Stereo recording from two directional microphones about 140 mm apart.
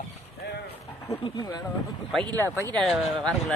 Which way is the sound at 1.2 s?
30° left (ahead or behind).